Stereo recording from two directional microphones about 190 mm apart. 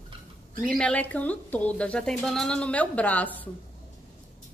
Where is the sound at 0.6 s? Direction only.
5° left (ahead or behind).